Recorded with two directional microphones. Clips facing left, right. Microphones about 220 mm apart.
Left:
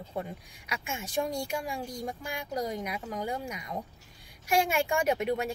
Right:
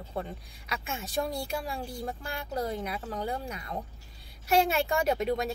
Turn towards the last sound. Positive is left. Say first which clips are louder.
# even
turn(degrees=10)  # may be behind; listen again after turning